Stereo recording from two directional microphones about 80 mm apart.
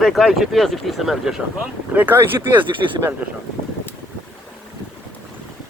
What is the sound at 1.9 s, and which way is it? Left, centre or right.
Speech, right.